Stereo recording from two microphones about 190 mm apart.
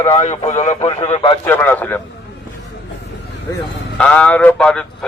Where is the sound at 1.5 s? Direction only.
10° left (ahead or behind).